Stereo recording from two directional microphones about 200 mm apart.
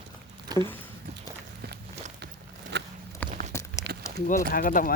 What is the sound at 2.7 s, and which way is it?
Walk, 60° right (ahead or behind).